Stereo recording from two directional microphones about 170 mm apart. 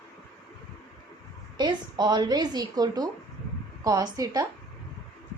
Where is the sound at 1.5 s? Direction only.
25° right (ahead or behind).